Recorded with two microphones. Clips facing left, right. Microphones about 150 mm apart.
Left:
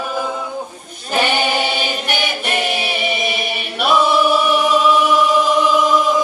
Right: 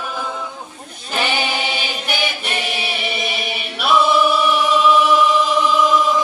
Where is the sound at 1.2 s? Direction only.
45° left (ahead or behind).